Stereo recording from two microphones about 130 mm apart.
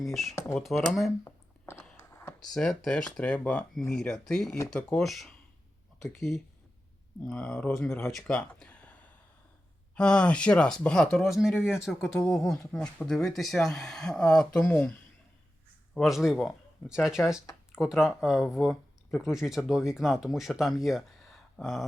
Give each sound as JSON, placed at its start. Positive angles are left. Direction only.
{"t": 0.0, "sound": "speech", "side_deg": 0}
{"t": 1.2, "sound": "a sound", "side_deg": 20}
{"t": 2.5, "sound": "speech", "side_deg": 5}
{"t": 16.0, "sound": "speech", "side_deg": 0}